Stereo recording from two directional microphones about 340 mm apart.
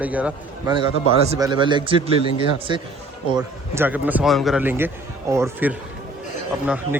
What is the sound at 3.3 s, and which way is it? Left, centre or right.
A man's voice, centre.